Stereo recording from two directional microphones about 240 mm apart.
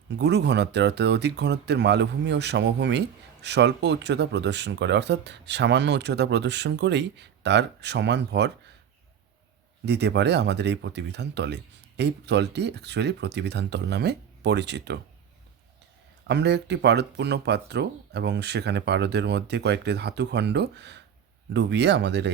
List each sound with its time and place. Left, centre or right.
0.2 s speech: right
9.8 s speech: right
16.2 s speech: right